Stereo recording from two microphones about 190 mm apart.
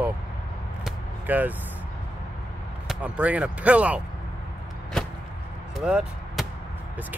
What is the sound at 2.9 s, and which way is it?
Speech, 5° right (ahead or behind).